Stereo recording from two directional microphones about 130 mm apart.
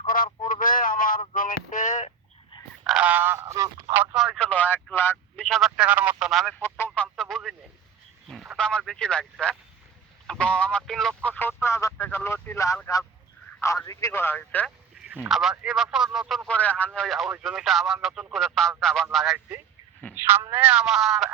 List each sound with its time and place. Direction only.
0.4 s a sound: 90° left; by 2.1 s 70° left (ahead or behind)
2.8 s honk: 5° right (ahead or behind)
3.4 s speech: 30° right (ahead or behind)
4.4 s speech: 10° left (ahead or behind)
5.4 s speech: centre (ahead or behind)
6.7 s a sound: 15° left (ahead or behind)
8.3 s speech: centre (ahead or behind); by 12.7 s 20° left (ahead or behind)
13.8 s speech: 25° left (ahead or behind)
15.0 s radio: 15° right (ahead or behind)
15.3 s speech: 5° right (ahead or behind)
16.5 s speech: 10° left (ahead or behind)
20.1 s speech: 20° right (ahead or behind); by 21.2 s centre (ahead or behind)